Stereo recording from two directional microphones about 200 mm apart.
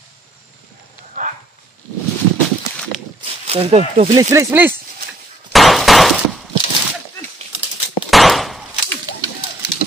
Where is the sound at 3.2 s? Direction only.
30° right (ahead or behind).